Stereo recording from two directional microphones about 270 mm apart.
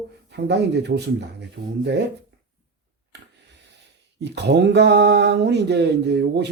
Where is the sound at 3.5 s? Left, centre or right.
Right.